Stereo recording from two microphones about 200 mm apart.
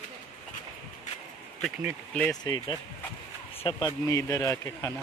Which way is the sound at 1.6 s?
Centre (ahead or behind).